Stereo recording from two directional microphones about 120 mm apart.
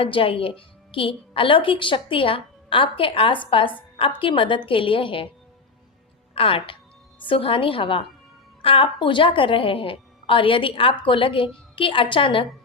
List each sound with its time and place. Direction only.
0.0 s a woman's voice: 50° left (ahead or behind)
6.3 s a woman's voice: 50° left (ahead or behind)